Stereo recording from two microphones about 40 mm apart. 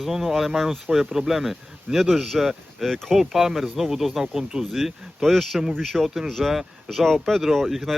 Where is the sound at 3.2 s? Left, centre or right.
Centre.